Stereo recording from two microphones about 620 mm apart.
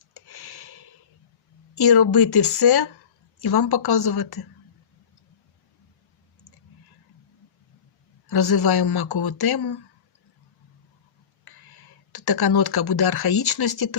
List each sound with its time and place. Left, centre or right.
0.1 s a sound: left
1.7 s speech: left
8.3 s speech: left
11.4 s speech: left